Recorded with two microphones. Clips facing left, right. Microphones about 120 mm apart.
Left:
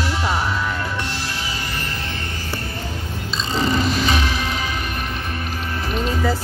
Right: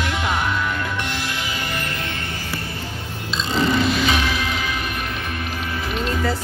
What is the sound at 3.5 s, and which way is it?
Music, 40° left (ahead or behind).